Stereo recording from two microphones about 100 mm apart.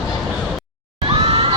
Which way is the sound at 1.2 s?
70° right (ahead or behind).